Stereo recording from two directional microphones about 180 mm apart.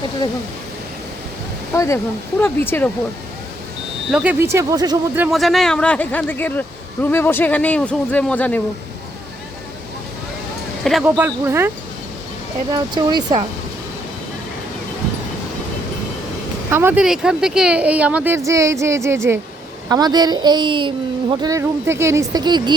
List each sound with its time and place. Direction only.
1.7 s speech: 15° left (ahead or behind)
4.1 s speech: 5° right (ahead or behind)
4.5 s speech: 20° right (ahead or behind)
5.3 s speech: centre (ahead or behind)
10.8 s speech: centre (ahead or behind)
11.2 s speech: 10° right (ahead or behind)
12.7 s speech: 25° right (ahead or behind)
16.7 s speech: 10° right (ahead or behind)